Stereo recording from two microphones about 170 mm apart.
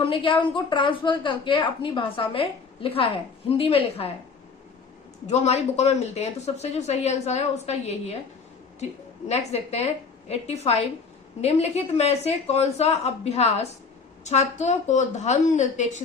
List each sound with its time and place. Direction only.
0.0 s a woman's voice: 30° left (ahead or behind)
5.2 s a woman's voice: 40° left (ahead or behind)